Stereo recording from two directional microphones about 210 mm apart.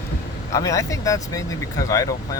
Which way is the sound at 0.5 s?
15° left (ahead or behind).